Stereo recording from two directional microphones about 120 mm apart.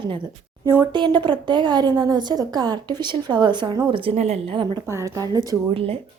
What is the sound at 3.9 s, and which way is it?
Speech, 55° right (ahead or behind).